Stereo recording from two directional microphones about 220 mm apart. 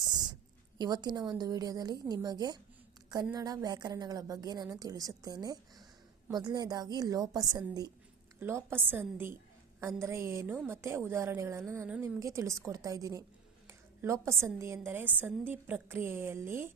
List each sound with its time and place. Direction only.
0.8 s a woman's voice: 20° right (ahead or behind)